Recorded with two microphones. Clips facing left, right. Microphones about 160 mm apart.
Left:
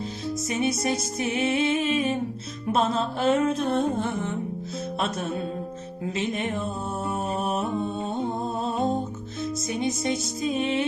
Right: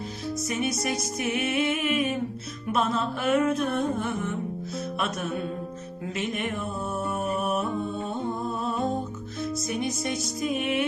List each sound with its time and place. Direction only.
0.4 s music: 25° left (ahead or behind)
8.6 s music: 25° left (ahead or behind)